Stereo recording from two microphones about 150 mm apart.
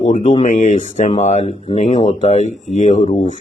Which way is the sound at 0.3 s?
50° left (ahead or behind).